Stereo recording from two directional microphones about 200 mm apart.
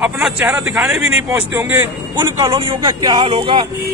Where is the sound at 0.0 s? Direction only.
5° right (ahead or behind).